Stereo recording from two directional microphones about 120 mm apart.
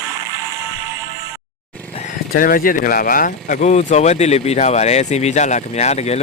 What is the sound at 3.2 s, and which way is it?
Speech, 90° left.